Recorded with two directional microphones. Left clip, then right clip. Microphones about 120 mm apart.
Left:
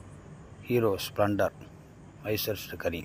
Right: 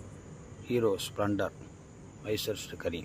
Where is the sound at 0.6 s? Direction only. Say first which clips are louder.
Left 2 dB; 25° left (ahead or behind).